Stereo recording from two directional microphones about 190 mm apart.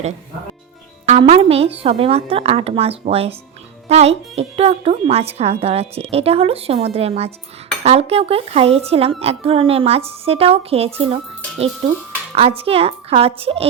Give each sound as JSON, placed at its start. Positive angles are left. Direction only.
{"t": 1.2, "sound": "speech", "side_deg": -30}
{"t": 12.3, "sound": "speech", "side_deg": -30}